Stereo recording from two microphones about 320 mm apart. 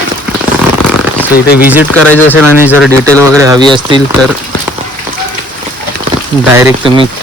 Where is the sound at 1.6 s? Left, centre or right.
Centre.